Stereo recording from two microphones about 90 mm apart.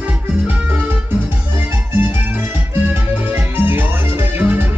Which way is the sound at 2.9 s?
25° right (ahead or behind).